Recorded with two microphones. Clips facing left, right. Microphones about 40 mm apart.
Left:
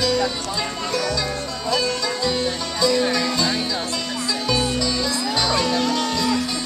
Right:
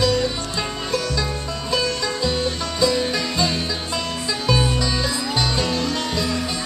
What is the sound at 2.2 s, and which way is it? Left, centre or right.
Music, centre.